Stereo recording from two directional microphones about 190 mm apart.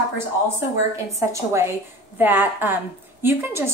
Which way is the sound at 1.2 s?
15° right (ahead or behind).